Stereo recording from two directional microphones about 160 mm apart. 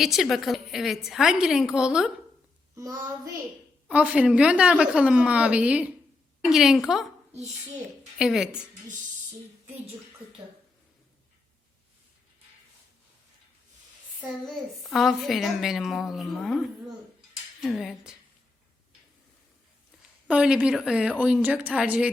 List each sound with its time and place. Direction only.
0.0 s a child's voice: centre (ahead or behind)
2.7 s child singing: 25° right (ahead or behind)
3.8 s a woman's voice: 5° right (ahead or behind)
8.2 s a child's voice: 5° right (ahead or behind)
14.2 s a child's voice: centre (ahead or behind)
20.2 s a child's voice: 5° right (ahead or behind)